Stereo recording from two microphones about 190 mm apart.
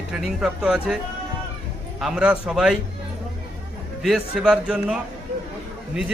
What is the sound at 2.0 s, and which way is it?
Speech, 5° right (ahead or behind).